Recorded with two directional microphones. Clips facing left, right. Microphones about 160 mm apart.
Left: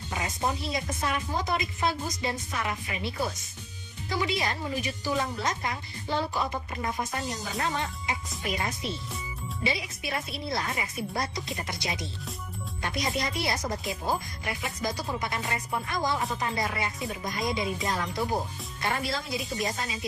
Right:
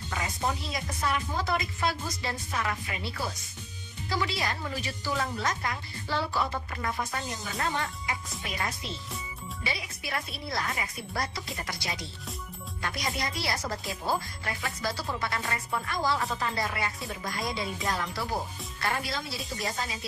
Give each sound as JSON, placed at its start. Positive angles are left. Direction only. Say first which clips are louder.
{"t": 0.7, "sound": "speech", "louder": "left 1 dB", "side_deg": 20}